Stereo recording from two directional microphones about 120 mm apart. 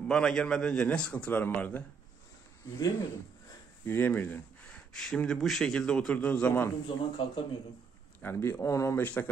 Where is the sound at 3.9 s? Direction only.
15° left (ahead or behind).